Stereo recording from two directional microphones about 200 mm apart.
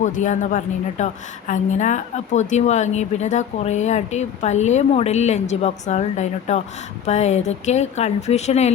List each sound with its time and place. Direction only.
0.0 s a woman's voice: 40° left (ahead or behind)